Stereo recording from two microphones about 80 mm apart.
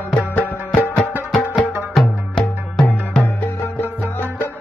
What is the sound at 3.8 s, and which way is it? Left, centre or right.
Music, left.